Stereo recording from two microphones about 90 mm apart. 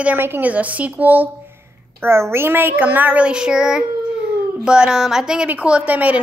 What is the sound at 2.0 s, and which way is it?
Child singing, 30° right (ahead or behind).